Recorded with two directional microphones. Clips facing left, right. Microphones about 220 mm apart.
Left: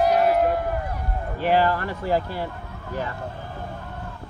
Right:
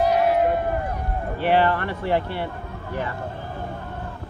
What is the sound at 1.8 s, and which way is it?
Speech, 40° left (ahead or behind).